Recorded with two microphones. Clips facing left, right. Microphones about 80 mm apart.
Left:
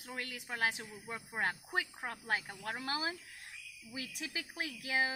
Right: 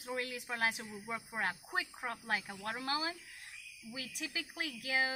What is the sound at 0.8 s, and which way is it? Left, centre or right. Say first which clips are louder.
Speech: right 2 dB; centre.